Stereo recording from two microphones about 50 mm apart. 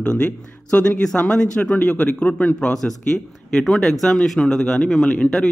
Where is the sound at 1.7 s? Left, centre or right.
Left.